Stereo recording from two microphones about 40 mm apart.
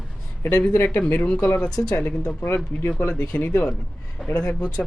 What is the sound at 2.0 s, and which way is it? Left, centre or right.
Speech, left.